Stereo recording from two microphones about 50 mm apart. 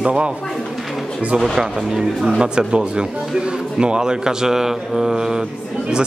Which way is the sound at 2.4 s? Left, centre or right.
Centre.